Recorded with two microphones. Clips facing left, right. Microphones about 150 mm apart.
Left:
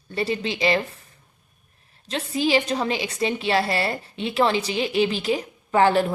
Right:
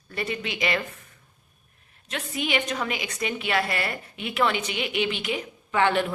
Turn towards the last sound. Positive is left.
turn(degrees=35)  # may be behind; listen again after turning